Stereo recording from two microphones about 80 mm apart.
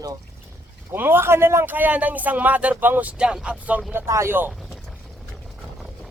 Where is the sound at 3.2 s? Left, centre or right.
Centre.